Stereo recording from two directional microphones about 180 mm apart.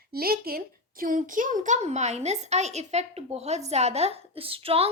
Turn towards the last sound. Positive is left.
turn(degrees=-30)  # may be behind; listen again after turning